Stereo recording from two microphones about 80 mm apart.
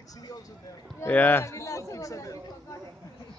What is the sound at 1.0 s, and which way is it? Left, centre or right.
Speech, left.